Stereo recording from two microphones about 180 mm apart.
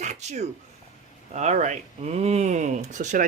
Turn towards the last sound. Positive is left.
turn(degrees=-45)  # may be behind; listen again after turning